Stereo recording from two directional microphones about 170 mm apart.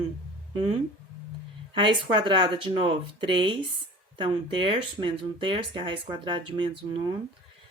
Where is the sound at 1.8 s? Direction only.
30° right (ahead or behind).